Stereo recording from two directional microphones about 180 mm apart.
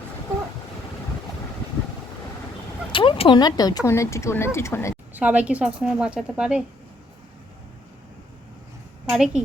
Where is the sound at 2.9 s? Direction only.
30° left (ahead or behind).